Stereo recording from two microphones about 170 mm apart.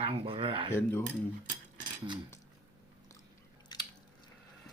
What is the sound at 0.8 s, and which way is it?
Speech, 10° left (ahead or behind).